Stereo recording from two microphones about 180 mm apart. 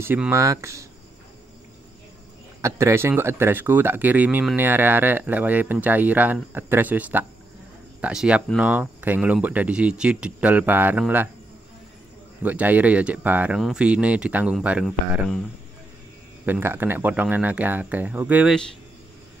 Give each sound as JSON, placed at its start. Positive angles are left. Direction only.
{"t": 0.0, "sound": "speech", "side_deg": -10}
{"t": 2.6, "sound": "speech", "side_deg": -15}
{"t": 12.4, "sound": "speech", "side_deg": -10}
{"t": 16.4, "sound": "speech", "side_deg": -10}